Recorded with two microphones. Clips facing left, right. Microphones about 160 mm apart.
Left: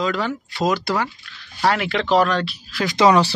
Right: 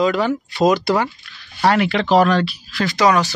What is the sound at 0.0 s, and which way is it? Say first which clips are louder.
Speech: right 5 dB; 15° right (ahead or behind).